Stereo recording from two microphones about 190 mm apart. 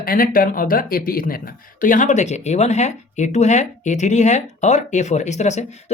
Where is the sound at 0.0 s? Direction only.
50° left (ahead or behind).